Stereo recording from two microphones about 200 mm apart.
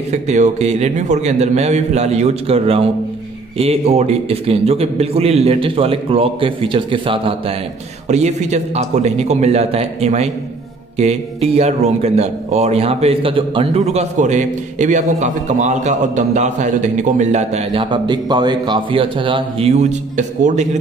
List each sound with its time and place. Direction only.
0.1 s a man's voice: 35° right (ahead or behind)